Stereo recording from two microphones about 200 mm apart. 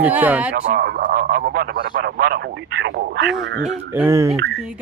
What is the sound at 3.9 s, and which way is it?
Speech, 10° right (ahead or behind).